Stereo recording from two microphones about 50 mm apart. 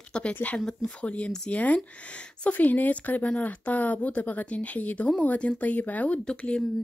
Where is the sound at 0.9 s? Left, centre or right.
Left.